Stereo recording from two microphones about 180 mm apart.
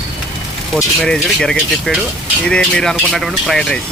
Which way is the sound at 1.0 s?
Centre (ahead or behind).